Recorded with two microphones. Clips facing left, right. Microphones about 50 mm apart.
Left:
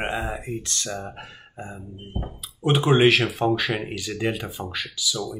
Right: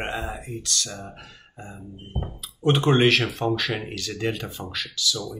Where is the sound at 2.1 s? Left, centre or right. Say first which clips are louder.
Even; centre.